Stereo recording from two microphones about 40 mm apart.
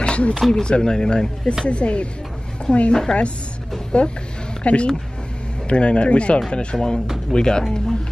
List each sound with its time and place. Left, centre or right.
0.0 s a sound: left
0.3 s a woman's voice: centre; by 2.9 s left
2.9 s speech: centre
3.9 s speech: left